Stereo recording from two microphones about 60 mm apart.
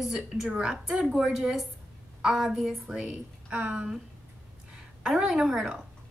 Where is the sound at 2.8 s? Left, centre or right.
Centre.